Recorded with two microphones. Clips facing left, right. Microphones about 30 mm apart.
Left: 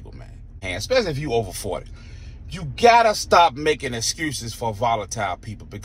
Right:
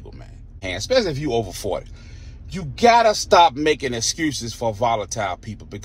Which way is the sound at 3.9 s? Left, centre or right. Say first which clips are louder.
Right 3 dB; centre.